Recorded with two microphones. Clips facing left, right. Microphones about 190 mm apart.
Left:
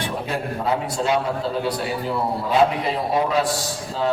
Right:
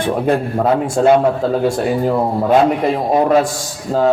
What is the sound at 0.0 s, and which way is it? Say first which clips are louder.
A man's voice: right 10 dB; 50° right (ahead or behind).